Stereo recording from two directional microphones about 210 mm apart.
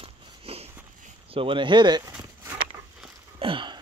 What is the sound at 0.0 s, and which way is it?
Biting, 25° right (ahead or behind).